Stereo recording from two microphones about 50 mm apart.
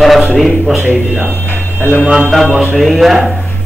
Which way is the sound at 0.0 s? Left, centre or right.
Centre.